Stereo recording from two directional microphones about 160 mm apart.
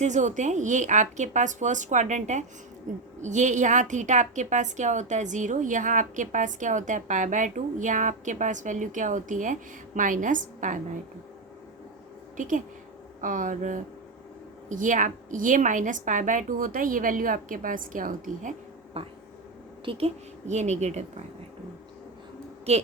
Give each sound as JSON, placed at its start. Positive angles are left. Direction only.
{"t": 0.0, "sound": "a woman's voice", "side_deg": -50}
{"t": 12.4, "sound": "a woman's voice", "side_deg": -55}
{"t": 19.0, "sound": "a woman's voice", "side_deg": -40}
{"t": 22.7, "sound": "speech", "side_deg": -40}